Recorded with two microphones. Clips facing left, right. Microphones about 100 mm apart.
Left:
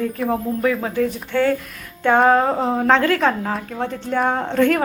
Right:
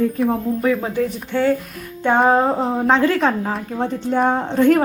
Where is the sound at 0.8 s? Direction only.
20° right (ahead or behind).